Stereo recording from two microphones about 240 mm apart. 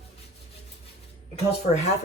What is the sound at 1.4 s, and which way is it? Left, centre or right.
Speech, left.